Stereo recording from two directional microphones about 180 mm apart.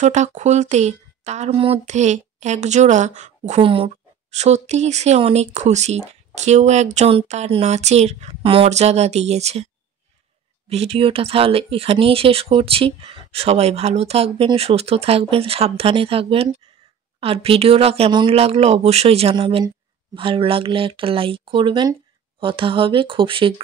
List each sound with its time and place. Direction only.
0.0 s speech: 40° right (ahead or behind)
10.7 s speech: 35° right (ahead or behind)